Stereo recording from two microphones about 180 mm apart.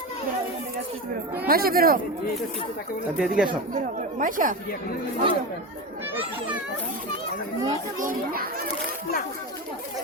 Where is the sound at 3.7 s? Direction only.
45° right (ahead or behind).